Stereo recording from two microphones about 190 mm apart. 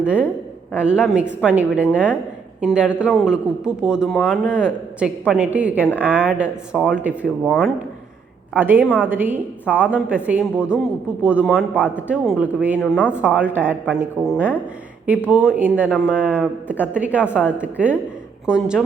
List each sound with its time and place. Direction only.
0.0 s speech: 5° right (ahead or behind)
8.5 s speech: 10° right (ahead or behind)
12.8 s speech: 10° left (ahead or behind)
13.1 s speech: 10° right (ahead or behind)